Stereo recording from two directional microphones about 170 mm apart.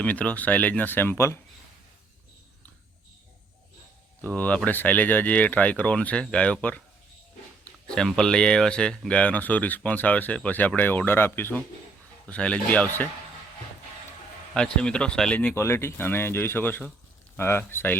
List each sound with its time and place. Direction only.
0.0 s speech: 10° left (ahead or behind)
4.2 s speech: 10° left (ahead or behind)
14.5 s speech: 5° left (ahead or behind)